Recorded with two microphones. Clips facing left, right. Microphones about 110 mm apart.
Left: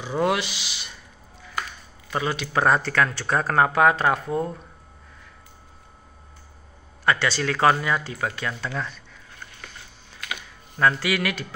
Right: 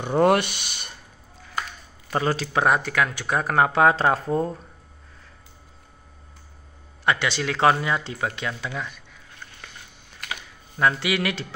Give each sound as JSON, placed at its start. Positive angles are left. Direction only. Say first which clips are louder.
{"t": 0.0, "sound": "speech", "louder": "right 5 dB", "side_deg": -50}
{"t": 2.0, "sound": "speech", "louder": "right 3 dB", "side_deg": -35}
{"t": 2.5, "sound": "speech", "louder": "left 2 dB", "side_deg": -15}
{"t": 7.1, "sound": "speech", "louder": "left 1 dB", "side_deg": -20}
{"t": 10.8, "sound": "speech", "louder": "even", "side_deg": -20}